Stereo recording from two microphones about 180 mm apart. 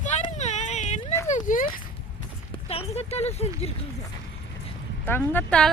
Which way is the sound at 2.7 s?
35° left (ahead or behind).